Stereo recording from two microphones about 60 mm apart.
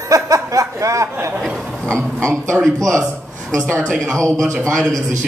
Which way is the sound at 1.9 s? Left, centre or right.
Centre.